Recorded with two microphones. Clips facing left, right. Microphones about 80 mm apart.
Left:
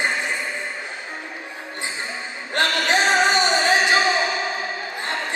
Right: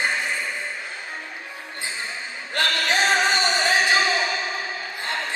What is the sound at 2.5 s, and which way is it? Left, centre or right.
Music, left.